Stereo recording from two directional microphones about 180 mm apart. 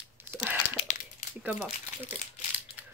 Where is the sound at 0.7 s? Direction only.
40° left (ahead or behind).